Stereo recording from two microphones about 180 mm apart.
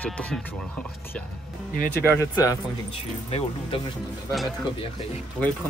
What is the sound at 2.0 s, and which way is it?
Speech, 15° left (ahead or behind).